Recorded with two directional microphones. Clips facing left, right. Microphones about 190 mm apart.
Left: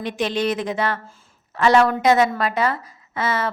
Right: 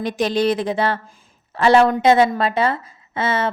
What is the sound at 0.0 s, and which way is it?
A woman's voice, 40° right (ahead or behind).